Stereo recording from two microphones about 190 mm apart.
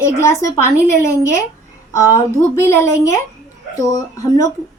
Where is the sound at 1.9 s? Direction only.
15° left (ahead or behind).